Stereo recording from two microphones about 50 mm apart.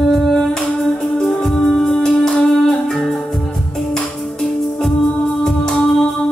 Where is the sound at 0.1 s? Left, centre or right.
Centre.